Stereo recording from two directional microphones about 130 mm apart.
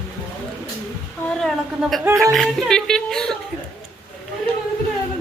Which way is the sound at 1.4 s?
Centre (ahead or behind).